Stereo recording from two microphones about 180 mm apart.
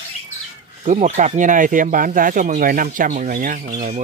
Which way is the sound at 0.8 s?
40° right (ahead or behind).